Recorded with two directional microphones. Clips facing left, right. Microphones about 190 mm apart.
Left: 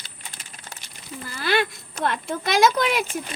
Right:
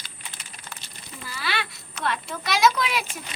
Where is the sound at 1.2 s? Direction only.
50° left (ahead or behind).